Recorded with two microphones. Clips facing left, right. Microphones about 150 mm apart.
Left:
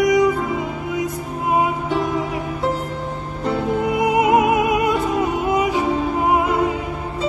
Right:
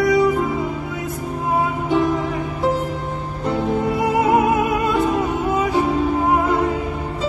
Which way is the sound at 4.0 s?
15° left (ahead or behind).